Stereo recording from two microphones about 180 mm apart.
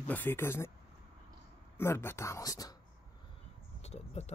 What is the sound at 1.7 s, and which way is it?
Speech, 15° left (ahead or behind).